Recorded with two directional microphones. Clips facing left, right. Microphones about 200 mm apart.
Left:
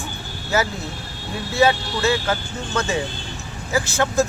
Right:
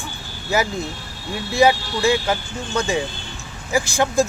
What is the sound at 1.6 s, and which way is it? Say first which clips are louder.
Speech: right 2 dB; 15° right (ahead or behind).